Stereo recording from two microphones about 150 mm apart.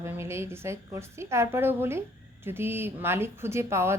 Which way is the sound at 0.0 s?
20° right (ahead or behind).